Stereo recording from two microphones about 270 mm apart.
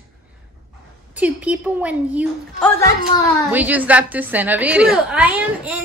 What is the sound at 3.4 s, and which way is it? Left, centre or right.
A woman's voice, centre.